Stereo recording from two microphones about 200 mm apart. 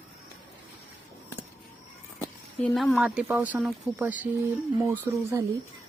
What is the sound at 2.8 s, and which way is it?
Speech, centre (ahead or behind).